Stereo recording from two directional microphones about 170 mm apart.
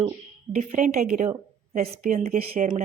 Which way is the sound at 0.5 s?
50° right (ahead or behind).